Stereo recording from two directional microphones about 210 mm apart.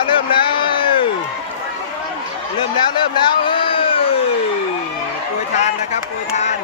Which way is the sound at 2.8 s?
20° left (ahead or behind).